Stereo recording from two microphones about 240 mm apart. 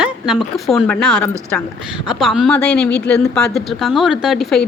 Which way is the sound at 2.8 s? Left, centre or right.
Left.